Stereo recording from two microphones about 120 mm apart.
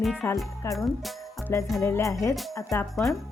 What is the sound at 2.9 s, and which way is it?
Speech, centre (ahead or behind).